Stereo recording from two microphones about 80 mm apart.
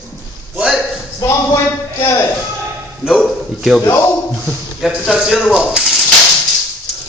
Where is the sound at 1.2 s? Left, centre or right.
Left.